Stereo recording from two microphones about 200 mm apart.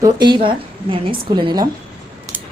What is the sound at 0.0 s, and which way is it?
A woman's voice, 20° right (ahead or behind).